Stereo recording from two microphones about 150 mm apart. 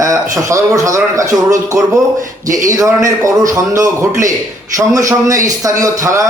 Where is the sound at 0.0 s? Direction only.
20° right (ahead or behind).